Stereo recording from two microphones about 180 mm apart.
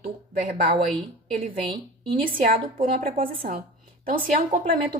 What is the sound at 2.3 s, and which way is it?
Speech, 50° right (ahead or behind).